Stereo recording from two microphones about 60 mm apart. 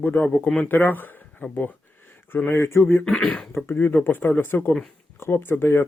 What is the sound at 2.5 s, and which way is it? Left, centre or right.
Speech, left.